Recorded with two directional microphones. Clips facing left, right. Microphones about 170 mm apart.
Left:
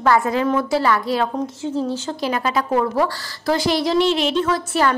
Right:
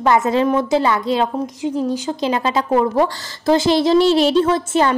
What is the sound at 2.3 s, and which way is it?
A woman's voice, 25° right (ahead or behind).